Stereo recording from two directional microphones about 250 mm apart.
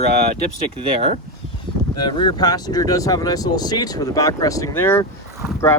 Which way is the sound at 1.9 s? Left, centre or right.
Centre.